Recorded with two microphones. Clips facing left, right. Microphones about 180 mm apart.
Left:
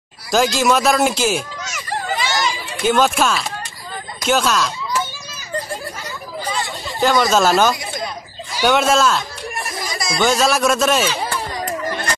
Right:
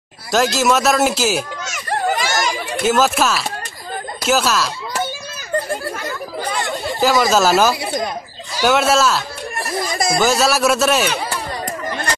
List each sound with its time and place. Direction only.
0.3 s speech: centre (ahead or behind)
1.9 s chatter: 50° right (ahead or behind)
2.8 s speech: 5° right (ahead or behind)
7.0 s speech: 5° right (ahead or behind)
7.8 s a sound: 40° right (ahead or behind)
8.6 s speech: 5° right (ahead or behind)